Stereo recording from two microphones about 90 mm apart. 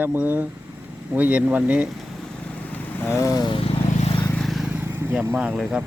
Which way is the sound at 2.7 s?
25° left (ahead or behind).